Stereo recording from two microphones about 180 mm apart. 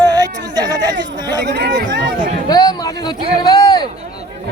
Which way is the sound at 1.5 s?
70° right (ahead or behind).